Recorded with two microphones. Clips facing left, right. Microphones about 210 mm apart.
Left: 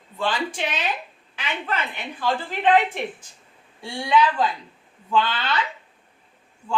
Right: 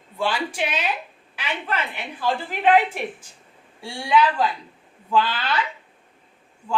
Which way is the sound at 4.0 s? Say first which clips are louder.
Even; 5° right (ahead or behind).